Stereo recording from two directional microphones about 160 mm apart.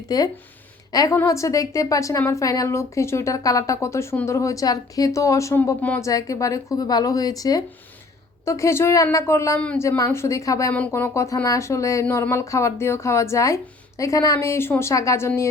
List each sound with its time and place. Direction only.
0.1 s a woman's voice: 25° left (ahead or behind)